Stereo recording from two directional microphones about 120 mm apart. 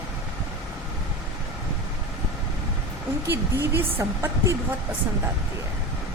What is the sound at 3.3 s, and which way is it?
Speech, 20° right (ahead or behind).